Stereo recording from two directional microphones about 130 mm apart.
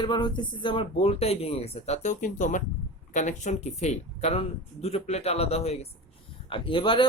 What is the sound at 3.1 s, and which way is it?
Speech, 65° left (ahead or behind).